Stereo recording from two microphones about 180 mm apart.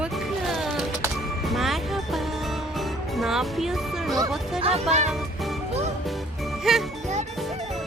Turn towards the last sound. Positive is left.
turn(degrees=0)  # may be behind; listen again after turning